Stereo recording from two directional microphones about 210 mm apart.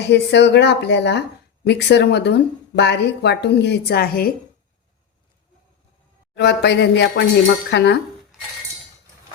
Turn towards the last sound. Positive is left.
turn(degrees=55)  # may be behind; listen again after turning